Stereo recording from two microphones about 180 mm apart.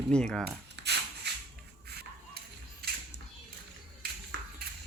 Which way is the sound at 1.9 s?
60° right (ahead or behind).